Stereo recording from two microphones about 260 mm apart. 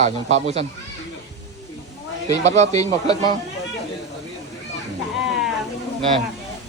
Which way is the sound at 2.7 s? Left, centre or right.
Centre.